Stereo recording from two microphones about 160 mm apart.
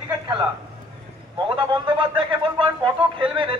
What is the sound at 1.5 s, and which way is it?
Speech, 30° right (ahead or behind).